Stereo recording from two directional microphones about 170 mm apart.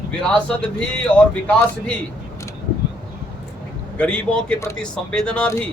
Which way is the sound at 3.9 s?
5° left (ahead or behind).